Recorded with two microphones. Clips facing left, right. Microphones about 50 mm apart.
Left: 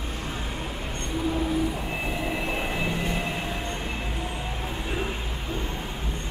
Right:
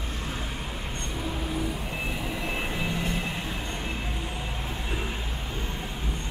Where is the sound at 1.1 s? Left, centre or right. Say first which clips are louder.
Left 8 dB; centre.